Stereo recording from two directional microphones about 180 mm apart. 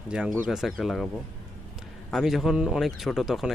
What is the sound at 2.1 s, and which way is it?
Speech, centre (ahead or behind).